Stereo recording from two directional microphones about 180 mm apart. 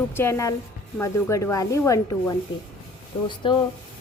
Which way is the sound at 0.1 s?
15° left (ahead or behind).